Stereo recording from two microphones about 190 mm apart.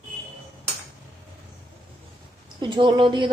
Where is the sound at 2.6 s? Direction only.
25° right (ahead or behind).